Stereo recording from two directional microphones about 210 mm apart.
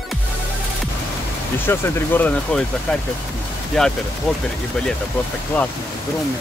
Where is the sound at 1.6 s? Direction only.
10° left (ahead or behind).